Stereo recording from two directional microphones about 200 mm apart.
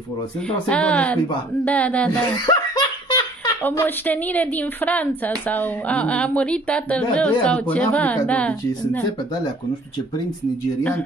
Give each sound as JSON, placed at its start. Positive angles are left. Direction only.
{"t": 0.5, "sound": "speech", "side_deg": 5}
{"t": 2.4, "sound": "laughter", "side_deg": 20}
{"t": 3.6, "sound": "speech", "side_deg": 10}
{"t": 10.8, "sound": "speech", "side_deg": 10}